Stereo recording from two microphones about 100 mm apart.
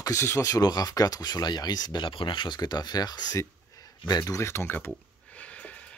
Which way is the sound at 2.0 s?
55° left (ahead or behind).